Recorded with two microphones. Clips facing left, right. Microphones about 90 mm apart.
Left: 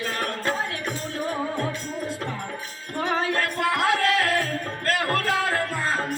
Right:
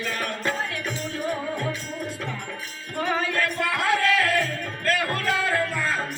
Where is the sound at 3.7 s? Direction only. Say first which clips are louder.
Left 2 dB; 35° left (ahead or behind).